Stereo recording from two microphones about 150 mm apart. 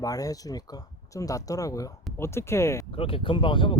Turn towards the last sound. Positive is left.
turn(degrees=35)  # may be behind; listen again after turning